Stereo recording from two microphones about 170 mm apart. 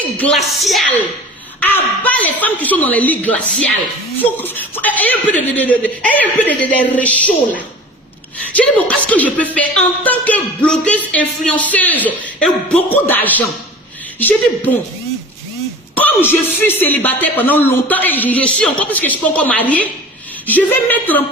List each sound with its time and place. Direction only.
0.2 s speech: centre (ahead or behind)
16.0 s speech: 10° left (ahead or behind)